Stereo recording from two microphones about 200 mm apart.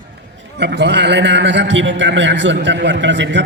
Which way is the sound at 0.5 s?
60° right (ahead or behind).